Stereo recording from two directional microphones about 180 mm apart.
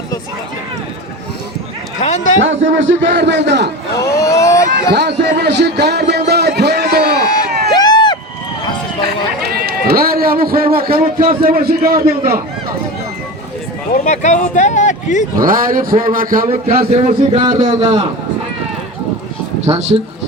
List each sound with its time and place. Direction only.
2.0 s speech: 40° left (ahead or behind)
2.4 s a man's voice: 90° right
3.2 s a man's voice: 75° right (ahead or behind)
4.0 s a sound: 15° left (ahead or behind)
5.4 s a man's voice: 70° right (ahead or behind)
7.7 s a sound: 25° left (ahead or behind)
9.4 s a man's voice: 60° right (ahead or behind)
13.9 s speech: 45° left (ahead or behind)
15.4 s speech: 50° right (ahead or behind)
16.9 s speech: 35° right (ahead or behind)
19.6 s speech: 35° right (ahead or behind)